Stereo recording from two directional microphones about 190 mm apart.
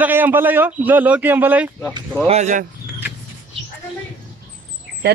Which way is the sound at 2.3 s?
40° right (ahead or behind).